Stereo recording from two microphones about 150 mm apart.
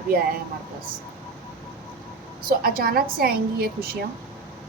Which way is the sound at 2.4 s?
75° right (ahead or behind).